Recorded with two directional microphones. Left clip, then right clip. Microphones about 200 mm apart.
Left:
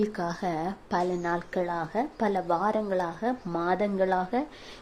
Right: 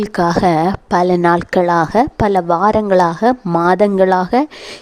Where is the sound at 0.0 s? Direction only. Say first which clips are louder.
Right 16 dB; 45° right (ahead or behind).